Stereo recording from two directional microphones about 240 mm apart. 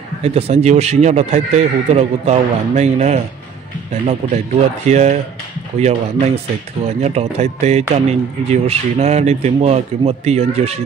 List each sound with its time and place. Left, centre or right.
0.2 s speech: right